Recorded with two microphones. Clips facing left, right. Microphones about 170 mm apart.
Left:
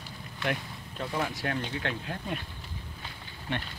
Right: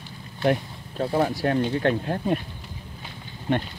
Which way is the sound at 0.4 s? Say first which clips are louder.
Right 10 dB; 35° right (ahead or behind).